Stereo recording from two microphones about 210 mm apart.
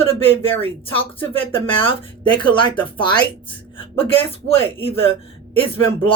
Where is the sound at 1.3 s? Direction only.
25° left (ahead or behind).